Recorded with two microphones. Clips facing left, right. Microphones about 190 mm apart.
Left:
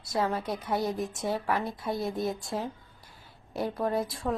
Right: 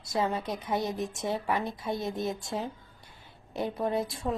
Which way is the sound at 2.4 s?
Centre (ahead or behind).